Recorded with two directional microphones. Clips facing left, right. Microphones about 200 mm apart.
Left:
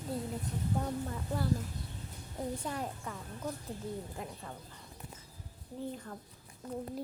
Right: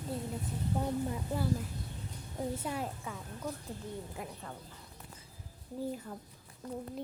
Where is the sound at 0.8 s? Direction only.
10° right (ahead or behind).